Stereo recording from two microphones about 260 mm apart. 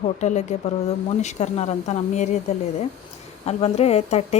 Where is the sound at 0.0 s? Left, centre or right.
Left.